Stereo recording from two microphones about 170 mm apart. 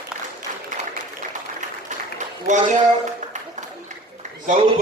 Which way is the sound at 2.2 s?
45° right (ahead or behind).